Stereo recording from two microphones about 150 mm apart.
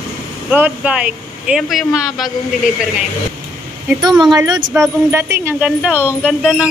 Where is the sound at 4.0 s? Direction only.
30° right (ahead or behind).